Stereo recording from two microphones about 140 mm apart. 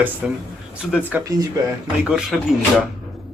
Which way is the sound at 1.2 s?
25° right (ahead or behind).